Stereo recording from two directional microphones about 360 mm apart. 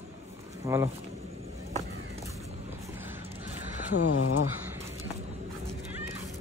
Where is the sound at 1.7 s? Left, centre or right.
Centre.